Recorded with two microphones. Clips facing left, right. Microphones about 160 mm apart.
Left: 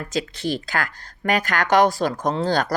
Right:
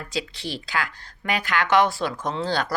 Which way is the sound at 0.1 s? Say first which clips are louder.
Left 6 dB; 45° left (ahead or behind).